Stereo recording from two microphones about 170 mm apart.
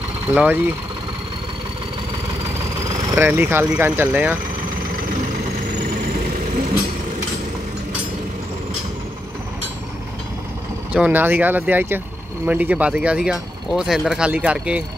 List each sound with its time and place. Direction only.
0.3 s speech: 10° right (ahead or behind)
3.2 s speech: 10° right (ahead or behind)
5.8 s vehicle: 50° right (ahead or behind)
10.9 s speech: 10° right (ahead or behind)